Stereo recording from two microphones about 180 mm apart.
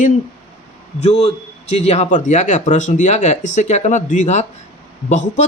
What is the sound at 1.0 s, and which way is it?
A man's voice, 35° left (ahead or behind).